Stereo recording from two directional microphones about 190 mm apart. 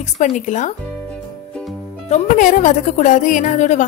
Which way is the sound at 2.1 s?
45° left (ahead or behind).